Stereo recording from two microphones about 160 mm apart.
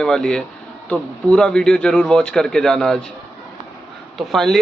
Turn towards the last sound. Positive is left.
turn(degrees=0)  # may be behind; listen again after turning